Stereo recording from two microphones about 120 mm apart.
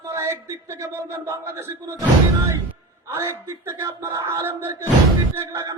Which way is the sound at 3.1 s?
20° right (ahead or behind).